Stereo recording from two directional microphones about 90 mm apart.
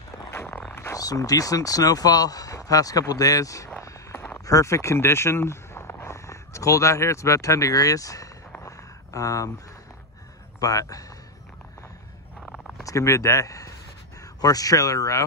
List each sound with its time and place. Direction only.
0.3 s a sound: 20° left (ahead or behind)
0.9 s speech: 40° left (ahead or behind)
3.8 s vehicle: 30° left (ahead or behind)
4.5 s speech: 35° left (ahead or behind)
8.6 s a sound: 35° left (ahead or behind)
10.6 s speech: 40° left (ahead or behind)
12.8 s speech: 35° left (ahead or behind)